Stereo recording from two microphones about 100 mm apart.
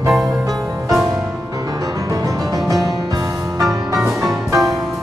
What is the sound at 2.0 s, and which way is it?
Music, 35° right (ahead or behind).